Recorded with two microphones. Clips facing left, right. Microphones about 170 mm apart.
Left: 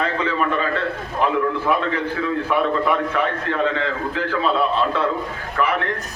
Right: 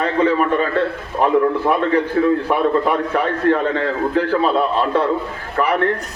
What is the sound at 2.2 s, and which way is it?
A man's voice, 40° right (ahead or behind).